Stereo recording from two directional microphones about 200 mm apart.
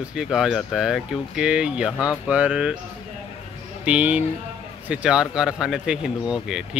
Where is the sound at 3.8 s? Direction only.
5° right (ahead or behind).